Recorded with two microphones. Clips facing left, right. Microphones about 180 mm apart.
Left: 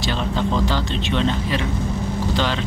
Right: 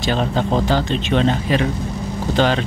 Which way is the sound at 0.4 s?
45° right (ahead or behind).